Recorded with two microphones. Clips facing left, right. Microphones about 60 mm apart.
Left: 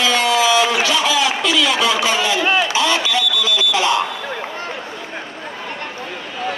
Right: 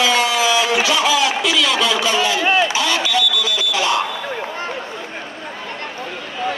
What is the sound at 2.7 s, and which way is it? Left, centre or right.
Smoke detector, left.